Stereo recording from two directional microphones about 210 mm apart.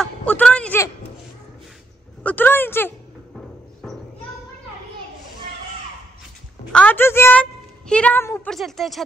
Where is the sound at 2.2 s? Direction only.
10° left (ahead or behind).